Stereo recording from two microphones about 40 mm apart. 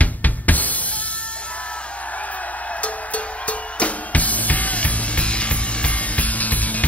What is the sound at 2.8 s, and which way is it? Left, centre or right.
Music, left.